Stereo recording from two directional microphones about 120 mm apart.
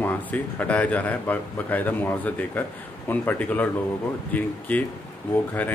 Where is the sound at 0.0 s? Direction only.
15° left (ahead or behind).